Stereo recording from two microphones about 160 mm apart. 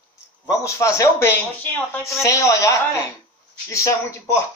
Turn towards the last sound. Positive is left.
turn(degrees=20)  # may be behind; listen again after turning